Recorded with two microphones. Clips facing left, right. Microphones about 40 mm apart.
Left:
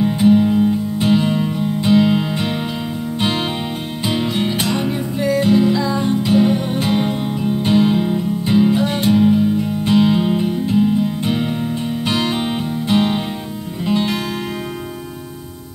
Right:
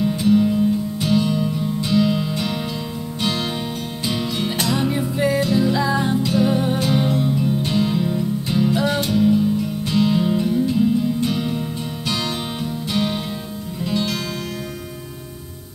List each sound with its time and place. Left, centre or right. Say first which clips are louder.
0.0 s music: left 4 dB; left
4.9 s music: left 1 dB; centre
5.4 s music: left 5 dB; left
5.7 s music: left 2 dB; centre
6.2 s music: left 3 dB; left